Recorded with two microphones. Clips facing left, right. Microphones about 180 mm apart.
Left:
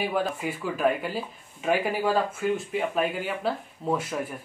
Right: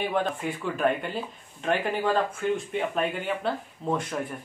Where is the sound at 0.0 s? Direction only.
5° left (ahead or behind).